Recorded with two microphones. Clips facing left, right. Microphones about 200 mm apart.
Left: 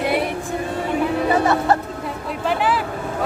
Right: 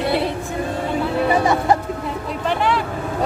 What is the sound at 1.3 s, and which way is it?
Music, 15° right (ahead or behind).